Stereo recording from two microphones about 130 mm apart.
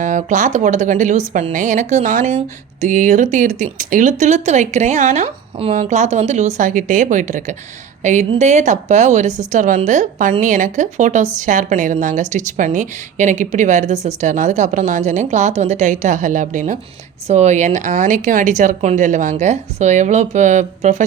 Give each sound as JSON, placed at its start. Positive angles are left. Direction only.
{"t": 0.0, "sound": "a woman's voice", "side_deg": -75}
{"t": 5.7, "sound": "a woman's voice", "side_deg": -65}
{"t": 9.5, "sound": "a woman's voice", "side_deg": -85}
{"t": 17.2, "sound": "a woman's voice", "side_deg": -60}